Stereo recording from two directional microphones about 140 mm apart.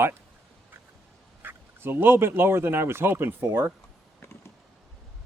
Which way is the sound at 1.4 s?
15° right (ahead or behind).